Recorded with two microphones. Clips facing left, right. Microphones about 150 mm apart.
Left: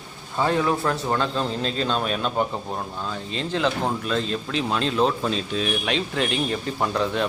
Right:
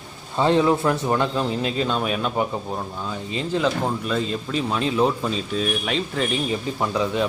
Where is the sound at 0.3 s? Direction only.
20° right (ahead or behind).